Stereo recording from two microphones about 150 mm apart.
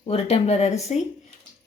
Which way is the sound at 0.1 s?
40° left (ahead or behind).